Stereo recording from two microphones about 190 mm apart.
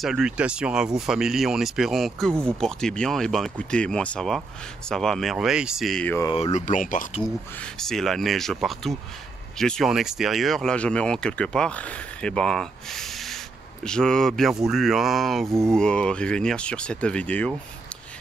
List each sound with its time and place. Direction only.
0.0 s speech: 5° right (ahead or behind)
6.3 s speech: 35° left (ahead or behind)
7.8 s speech: centre (ahead or behind)